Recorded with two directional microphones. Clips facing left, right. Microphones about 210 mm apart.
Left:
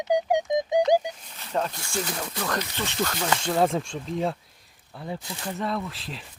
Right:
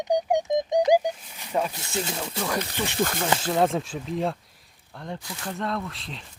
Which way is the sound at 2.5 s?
10° right (ahead or behind).